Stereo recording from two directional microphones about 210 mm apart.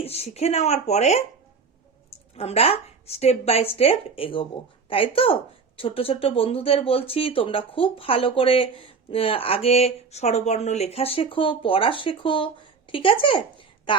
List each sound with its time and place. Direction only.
0.0 s speech: 30° left (ahead or behind)
2.3 s a woman's voice: 30° left (ahead or behind)